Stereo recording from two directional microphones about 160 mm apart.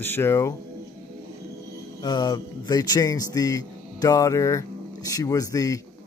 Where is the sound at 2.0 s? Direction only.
25° left (ahead or behind).